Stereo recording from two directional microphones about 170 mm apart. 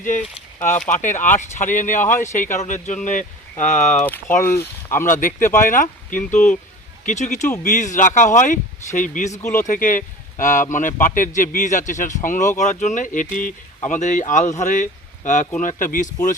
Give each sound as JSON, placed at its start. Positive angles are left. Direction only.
{"t": 0.9, "sound": "speech", "side_deg": 45}
{"t": 2.0, "sound": "speech", "side_deg": 15}
{"t": 2.3, "sound": "speech", "side_deg": 45}
{"t": 4.0, "sound": "speech", "side_deg": 10}
{"t": 5.0, "sound": "speech", "side_deg": 50}